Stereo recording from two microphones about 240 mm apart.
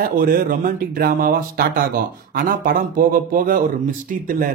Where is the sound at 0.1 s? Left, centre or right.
Right.